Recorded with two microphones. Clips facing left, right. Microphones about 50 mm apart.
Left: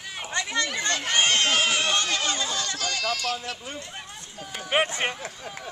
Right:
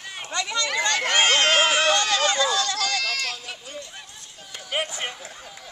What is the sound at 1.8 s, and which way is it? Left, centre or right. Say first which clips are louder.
Run: right 5 dB; right.